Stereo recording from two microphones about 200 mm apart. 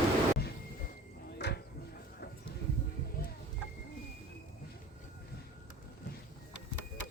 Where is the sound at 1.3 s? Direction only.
55° left (ahead or behind).